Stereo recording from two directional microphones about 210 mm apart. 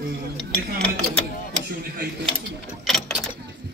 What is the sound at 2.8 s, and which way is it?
Speech, centre (ahead or behind).